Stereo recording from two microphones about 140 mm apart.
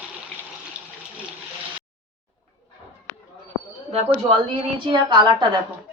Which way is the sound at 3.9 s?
45° right (ahead or behind).